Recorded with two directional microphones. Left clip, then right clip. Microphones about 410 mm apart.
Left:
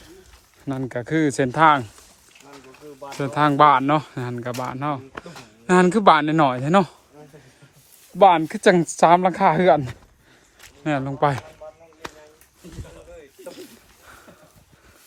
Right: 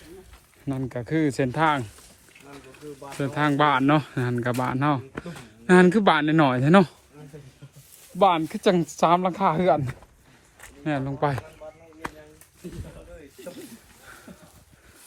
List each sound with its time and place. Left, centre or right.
0.6 s speech: centre
3.0 s speech: centre
8.2 s speech: centre
10.8 s speech: centre
13.4 s snake: centre